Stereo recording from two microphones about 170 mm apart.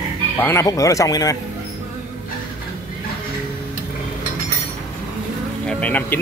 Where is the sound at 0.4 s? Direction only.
15° left (ahead or behind).